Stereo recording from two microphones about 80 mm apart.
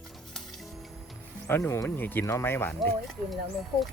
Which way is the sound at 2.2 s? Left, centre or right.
Left.